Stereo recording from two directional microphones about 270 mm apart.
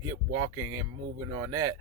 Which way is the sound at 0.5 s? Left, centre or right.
Right.